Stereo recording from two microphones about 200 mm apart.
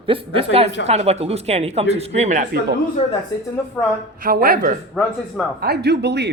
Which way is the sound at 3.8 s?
10° left (ahead or behind).